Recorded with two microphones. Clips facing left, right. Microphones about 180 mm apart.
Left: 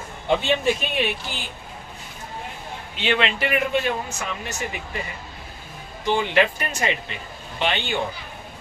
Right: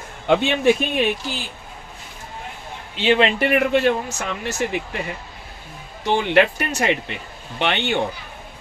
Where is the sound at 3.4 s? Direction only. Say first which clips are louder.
Right 5 dB; 60° right (ahead or behind).